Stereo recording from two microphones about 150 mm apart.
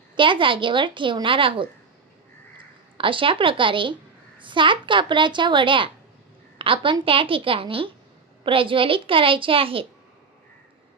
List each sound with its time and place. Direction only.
0.2 s a woman's voice: 35° right (ahead or behind)
3.0 s a woman's voice: 35° right (ahead or behind)